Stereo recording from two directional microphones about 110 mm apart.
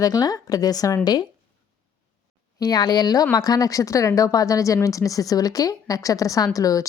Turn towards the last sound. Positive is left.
turn(degrees=30)  # may be behind; listen again after turning